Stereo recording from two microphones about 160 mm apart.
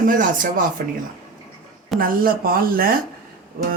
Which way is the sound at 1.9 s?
65° right (ahead or behind).